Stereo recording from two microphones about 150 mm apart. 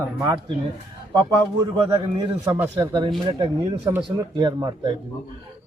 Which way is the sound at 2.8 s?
30° right (ahead or behind).